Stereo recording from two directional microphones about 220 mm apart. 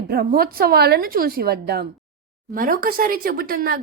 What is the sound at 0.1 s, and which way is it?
A woman's voice, 45° right (ahead or behind).